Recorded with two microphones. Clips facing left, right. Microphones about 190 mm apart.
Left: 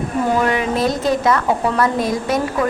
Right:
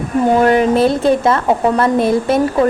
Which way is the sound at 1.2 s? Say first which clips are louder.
Right 3 dB; 25° right (ahead or behind).